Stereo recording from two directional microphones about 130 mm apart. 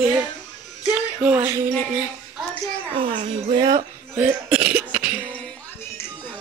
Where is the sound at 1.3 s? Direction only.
20° right (ahead or behind).